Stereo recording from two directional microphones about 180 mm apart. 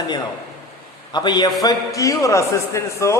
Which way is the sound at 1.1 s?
25° left (ahead or behind).